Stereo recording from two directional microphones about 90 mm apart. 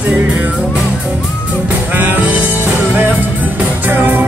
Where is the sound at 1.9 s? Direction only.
20° right (ahead or behind).